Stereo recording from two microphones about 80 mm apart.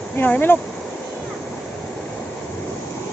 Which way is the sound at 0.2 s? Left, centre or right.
Left.